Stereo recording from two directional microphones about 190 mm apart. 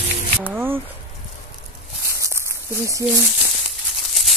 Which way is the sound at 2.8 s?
15° right (ahead or behind).